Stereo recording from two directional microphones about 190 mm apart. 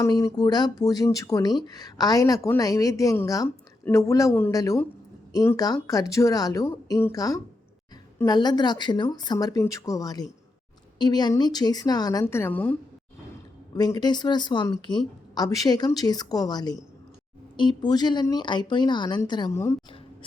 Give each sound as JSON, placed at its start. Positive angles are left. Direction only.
{"t": 0.0, "sound": "a woman's voice", "side_deg": 15}
{"t": 13.7, "sound": "a woman's voice", "side_deg": 20}